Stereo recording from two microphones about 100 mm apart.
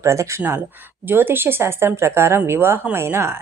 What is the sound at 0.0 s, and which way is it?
Speech, 30° right (ahead or behind).